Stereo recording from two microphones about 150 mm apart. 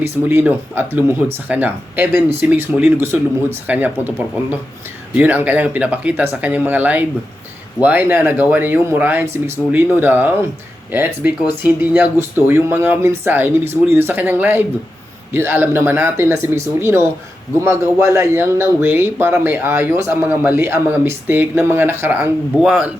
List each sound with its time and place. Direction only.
0.0 s speech: 15° right (ahead or behind)
5.1 s speech: 10° right (ahead or behind)